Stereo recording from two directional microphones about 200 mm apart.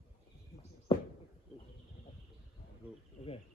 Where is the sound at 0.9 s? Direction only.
25° left (ahead or behind).